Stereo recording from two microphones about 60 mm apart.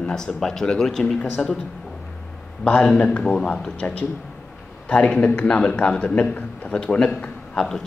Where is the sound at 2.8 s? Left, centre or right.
Left.